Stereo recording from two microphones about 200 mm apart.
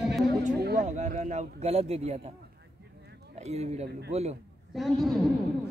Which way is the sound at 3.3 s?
35° right (ahead or behind).